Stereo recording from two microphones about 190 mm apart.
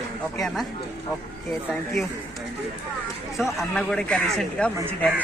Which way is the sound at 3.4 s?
5° left (ahead or behind).